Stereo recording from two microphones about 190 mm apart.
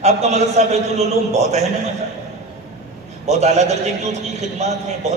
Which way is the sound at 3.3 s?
35° right (ahead or behind).